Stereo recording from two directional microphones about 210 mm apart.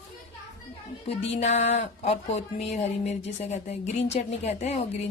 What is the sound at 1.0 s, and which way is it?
Speech, 30° left (ahead or behind).